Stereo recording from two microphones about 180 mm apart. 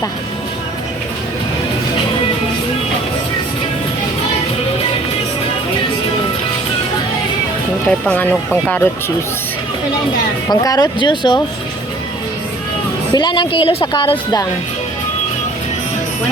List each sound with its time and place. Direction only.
7.9 s speech: 5° left (ahead or behind)
10.5 s speech: 20° left (ahead or behind)
13.1 s speech: 25° left (ahead or behind)